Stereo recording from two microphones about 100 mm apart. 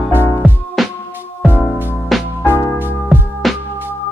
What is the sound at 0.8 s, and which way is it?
Music, centre (ahead or behind).